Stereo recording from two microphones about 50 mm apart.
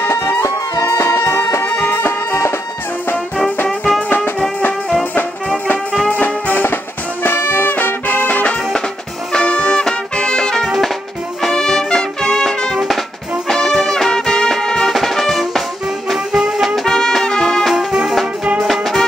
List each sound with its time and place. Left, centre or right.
0.9 s music: left
1.2 s music: left
4.6 s music: left
6.1 s music: left
9.3 s music: centre
16.3 s music: centre
16.6 s music: centre
17.7 s music: centre
18.7 s music: centre